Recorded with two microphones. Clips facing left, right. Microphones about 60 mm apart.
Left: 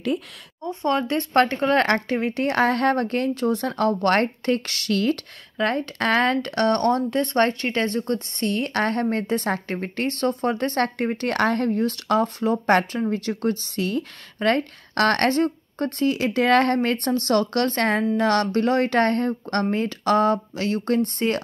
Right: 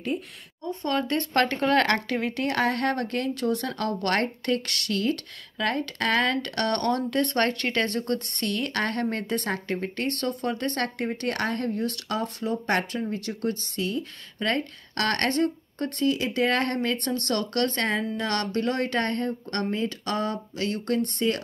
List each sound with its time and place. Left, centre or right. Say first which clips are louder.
0.8 s speech: left 4 dB; left
2.6 s speech: left 6 dB; left
7.6 s speech: left 3 dB; centre
8.5 s speech: left 5 dB; left
11.8 s speech: left 7 dB; left
13.7 s a woman's voice: left 4 dB; left
16.3 s a woman's voice: left 6 dB; left